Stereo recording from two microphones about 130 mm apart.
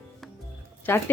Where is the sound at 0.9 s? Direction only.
15° left (ahead or behind).